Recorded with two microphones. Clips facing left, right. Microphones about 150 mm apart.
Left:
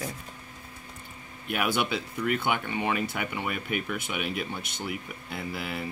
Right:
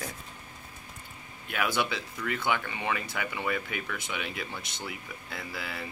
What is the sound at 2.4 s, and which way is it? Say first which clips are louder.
Speech: left 2 dB; 25° left (ahead or behind).